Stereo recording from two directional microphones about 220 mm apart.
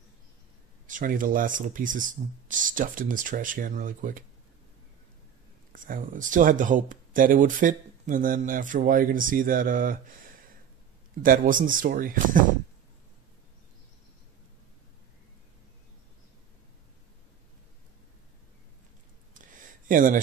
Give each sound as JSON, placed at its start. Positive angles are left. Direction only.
{"t": 0.8, "sound": "speech", "side_deg": -35}
{"t": 5.9, "sound": "speech", "side_deg": -35}
{"t": 11.2, "sound": "speech", "side_deg": -40}
{"t": 19.9, "sound": "speech", "side_deg": -35}